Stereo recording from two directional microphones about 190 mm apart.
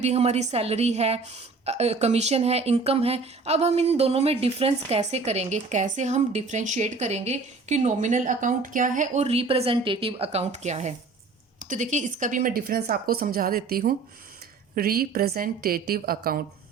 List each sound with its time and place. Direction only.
0.0 s a woman's voice: 35° right (ahead or behind); by 16.4 s 50° right (ahead or behind)